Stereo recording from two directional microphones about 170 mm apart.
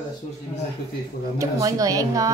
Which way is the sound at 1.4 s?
20° right (ahead or behind).